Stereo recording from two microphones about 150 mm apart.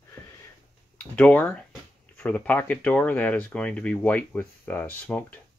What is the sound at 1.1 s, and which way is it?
Speech, 10° left (ahead or behind).